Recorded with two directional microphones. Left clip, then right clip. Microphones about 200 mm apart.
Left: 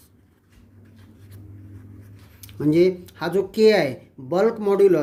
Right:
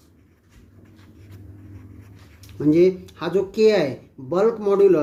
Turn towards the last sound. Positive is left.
turn(degrees=35)  # may be behind; listen again after turning